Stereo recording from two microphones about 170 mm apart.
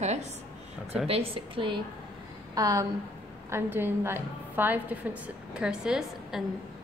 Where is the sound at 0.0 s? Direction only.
40° right (ahead or behind).